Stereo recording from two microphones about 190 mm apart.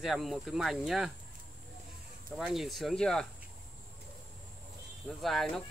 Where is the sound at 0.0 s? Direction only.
Centre (ahead or behind).